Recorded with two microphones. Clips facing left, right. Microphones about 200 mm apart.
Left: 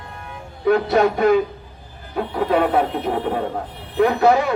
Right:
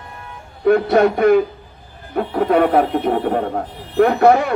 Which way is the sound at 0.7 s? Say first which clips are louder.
Right 3 dB; 55° right (ahead or behind).